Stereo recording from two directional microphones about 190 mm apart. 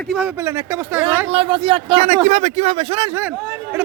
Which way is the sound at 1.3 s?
30° right (ahead or behind).